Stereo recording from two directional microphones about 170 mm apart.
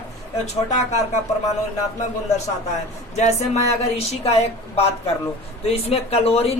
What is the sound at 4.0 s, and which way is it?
Speech, 40° left (ahead or behind).